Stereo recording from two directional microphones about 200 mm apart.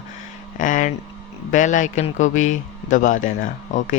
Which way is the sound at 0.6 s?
40° left (ahead or behind).